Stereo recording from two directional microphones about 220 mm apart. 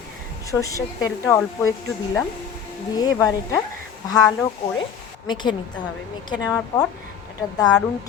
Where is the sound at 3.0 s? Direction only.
15° left (ahead or behind).